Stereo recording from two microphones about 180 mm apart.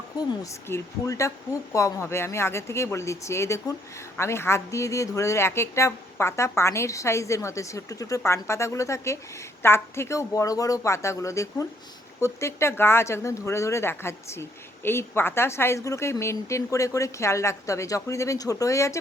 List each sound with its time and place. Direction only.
0.7 s speech: 15° left (ahead or behind)